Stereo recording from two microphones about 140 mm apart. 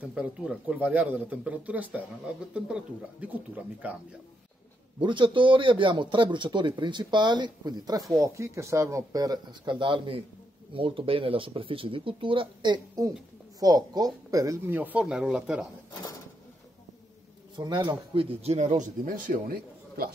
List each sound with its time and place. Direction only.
0.0 s speech: 10° right (ahead or behind)
5.0 s a man's voice: 35° right (ahead or behind); by 15.7 s 5° right (ahead or behind)
17.6 s speech: 35° right (ahead or behind); by 20.1 s 90° right